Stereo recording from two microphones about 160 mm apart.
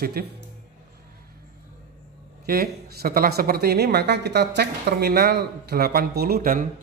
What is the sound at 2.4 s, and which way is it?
Speech, 75° right (ahead or behind).